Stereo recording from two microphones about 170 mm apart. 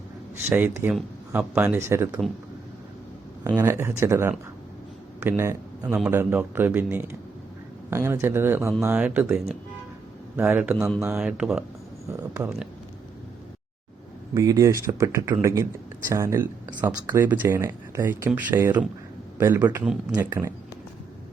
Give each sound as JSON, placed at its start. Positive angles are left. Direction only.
{"t": 0.5, "sound": "a man's voice", "side_deg": -10}
{"t": 3.5, "sound": "a man's voice", "side_deg": -15}
{"t": 12.1, "sound": "a sound", "side_deg": -20}
{"t": 14.3, "sound": "a man's voice", "side_deg": -20}
{"t": 19.8, "sound": "speech", "side_deg": -5}
{"t": 20.1, "sound": "a man's voice", "side_deg": -15}